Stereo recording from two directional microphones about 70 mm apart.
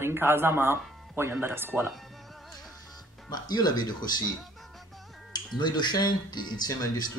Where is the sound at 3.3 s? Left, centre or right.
Left.